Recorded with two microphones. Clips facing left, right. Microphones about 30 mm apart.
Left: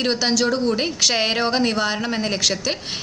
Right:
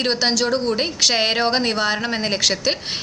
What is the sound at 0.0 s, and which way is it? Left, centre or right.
A woman's voice, centre.